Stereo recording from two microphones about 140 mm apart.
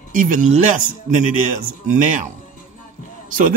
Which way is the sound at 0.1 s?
70° right (ahead or behind).